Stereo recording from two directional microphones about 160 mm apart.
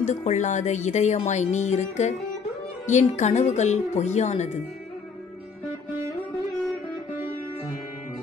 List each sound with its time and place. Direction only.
0.0 s speech: 45° left (ahead or behind)